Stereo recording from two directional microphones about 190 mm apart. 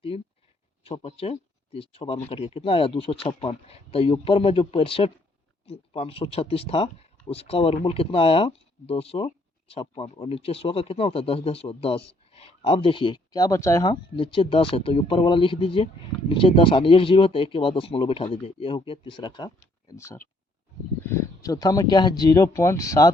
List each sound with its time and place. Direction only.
0.1 s speech: 30° left (ahead or behind)